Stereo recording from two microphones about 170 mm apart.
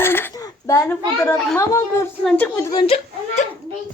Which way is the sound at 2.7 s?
30° left (ahead or behind).